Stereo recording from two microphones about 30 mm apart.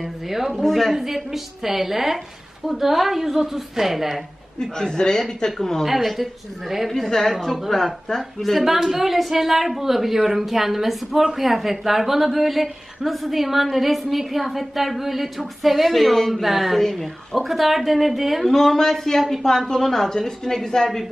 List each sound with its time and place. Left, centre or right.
0.0 s a woman's voice: centre
0.6 s speech: centre
0.9 s a woman's voice: centre
4.6 s a man's voice: left
5.6 s speech: centre
6.9 s speech: centre
8.6 s a woman's voice: centre
18.5 s speech: centre